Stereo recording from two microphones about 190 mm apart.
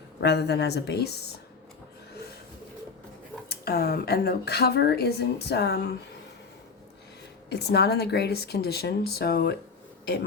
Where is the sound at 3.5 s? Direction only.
55° left (ahead or behind).